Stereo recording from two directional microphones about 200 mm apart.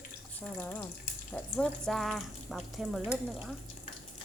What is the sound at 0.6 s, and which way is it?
Speech, 10° left (ahead or behind).